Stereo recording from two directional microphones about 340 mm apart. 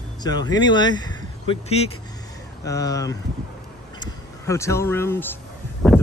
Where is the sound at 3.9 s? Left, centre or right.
Centre.